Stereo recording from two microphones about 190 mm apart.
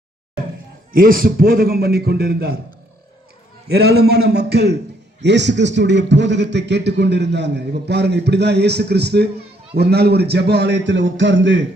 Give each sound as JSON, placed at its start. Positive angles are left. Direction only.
{"t": 0.9, "sound": "a man's voice", "side_deg": -50}
{"t": 3.7, "sound": "a man's voice", "side_deg": -60}